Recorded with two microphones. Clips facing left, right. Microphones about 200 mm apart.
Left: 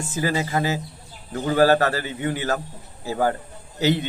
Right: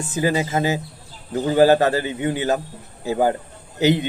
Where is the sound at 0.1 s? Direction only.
20° right (ahead or behind).